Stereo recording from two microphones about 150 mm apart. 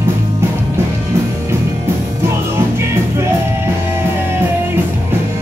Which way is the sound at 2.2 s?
15° right (ahead or behind).